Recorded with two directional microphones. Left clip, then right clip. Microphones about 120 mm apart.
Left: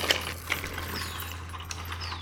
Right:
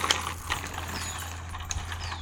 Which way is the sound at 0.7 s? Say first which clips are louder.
Even; 5° left (ahead or behind).